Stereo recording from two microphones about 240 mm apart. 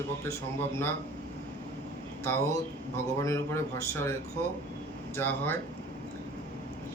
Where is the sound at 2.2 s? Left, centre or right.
Centre.